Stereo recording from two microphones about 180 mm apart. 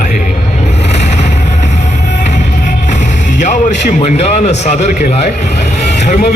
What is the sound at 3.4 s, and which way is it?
A man's voice, 40° left (ahead or behind).